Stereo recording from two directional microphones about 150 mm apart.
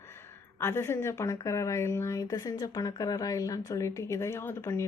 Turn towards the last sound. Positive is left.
turn(degrees=20)  # may be behind; listen again after turning